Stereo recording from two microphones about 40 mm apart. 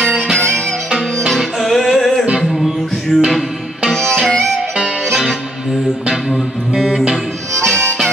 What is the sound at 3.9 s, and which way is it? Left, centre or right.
Music, centre.